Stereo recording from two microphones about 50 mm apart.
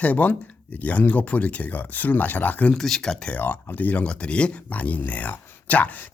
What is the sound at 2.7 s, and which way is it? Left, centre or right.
Speech, centre.